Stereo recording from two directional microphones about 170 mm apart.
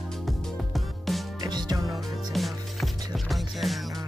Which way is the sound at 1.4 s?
25° right (ahead or behind).